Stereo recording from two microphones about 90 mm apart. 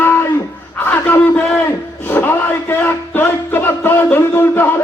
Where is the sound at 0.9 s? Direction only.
20° left (ahead or behind).